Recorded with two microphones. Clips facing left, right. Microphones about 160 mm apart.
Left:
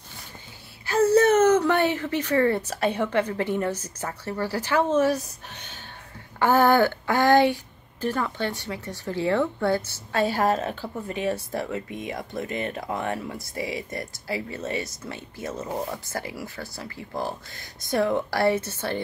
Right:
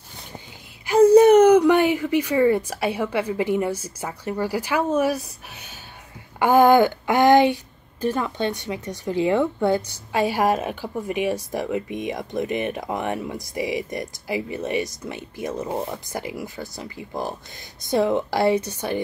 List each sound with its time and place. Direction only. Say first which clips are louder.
0.8 s speech: right 6 dB; 15° right (ahead or behind)